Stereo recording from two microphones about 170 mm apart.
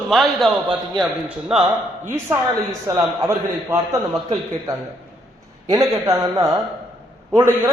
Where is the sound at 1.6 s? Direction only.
15° right (ahead or behind).